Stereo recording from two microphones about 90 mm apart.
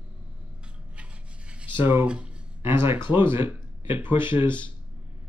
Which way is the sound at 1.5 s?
10° right (ahead or behind).